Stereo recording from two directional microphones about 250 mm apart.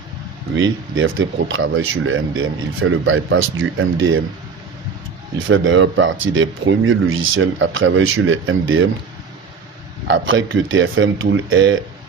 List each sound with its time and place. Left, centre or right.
0.9 s speech: right
5.4 s speech: right
10.1 s speech: right